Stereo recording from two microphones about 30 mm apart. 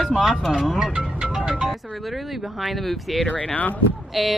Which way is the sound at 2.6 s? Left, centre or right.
Centre.